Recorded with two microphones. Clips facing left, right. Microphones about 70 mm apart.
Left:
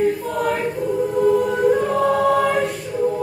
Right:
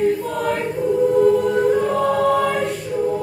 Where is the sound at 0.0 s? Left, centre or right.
Centre.